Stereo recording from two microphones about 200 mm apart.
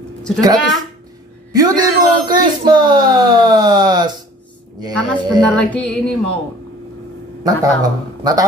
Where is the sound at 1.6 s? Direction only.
20° right (ahead or behind).